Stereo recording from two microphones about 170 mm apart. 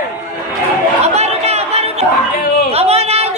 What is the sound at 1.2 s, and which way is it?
Chatter, 40° right (ahead or behind).